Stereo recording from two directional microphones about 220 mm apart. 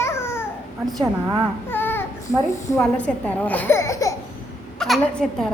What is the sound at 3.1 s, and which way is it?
Speech, 5° left (ahead or behind).